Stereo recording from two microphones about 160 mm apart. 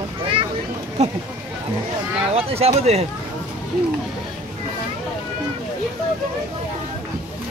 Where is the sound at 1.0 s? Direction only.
40° right (ahead or behind).